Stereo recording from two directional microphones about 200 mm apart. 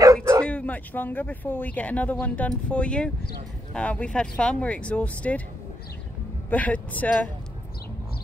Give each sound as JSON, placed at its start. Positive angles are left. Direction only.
{"t": 0.0, "sound": "bow-wow", "side_deg": -15}
{"t": 0.4, "sound": "speech", "side_deg": 5}
{"t": 6.5, "sound": "speech", "side_deg": 5}